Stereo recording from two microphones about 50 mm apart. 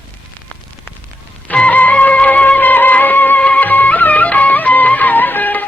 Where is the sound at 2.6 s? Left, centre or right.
Left.